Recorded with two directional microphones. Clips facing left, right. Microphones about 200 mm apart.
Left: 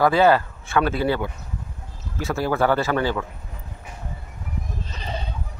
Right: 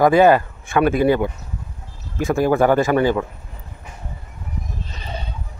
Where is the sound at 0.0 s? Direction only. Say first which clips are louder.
Right 4 dB; 15° right (ahead or behind).